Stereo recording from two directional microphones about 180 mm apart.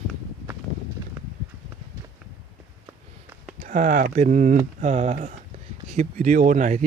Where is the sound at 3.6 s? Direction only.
45° right (ahead or behind).